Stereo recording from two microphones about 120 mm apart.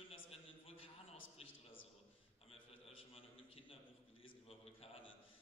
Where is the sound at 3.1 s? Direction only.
50° left (ahead or behind).